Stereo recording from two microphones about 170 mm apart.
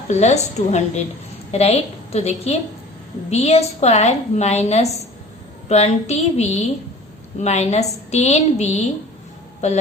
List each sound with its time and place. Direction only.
0.1 s a woman's voice: 40° left (ahead or behind)